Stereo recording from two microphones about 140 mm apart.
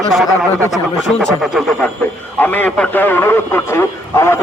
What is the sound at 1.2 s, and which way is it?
Speech, centre (ahead or behind).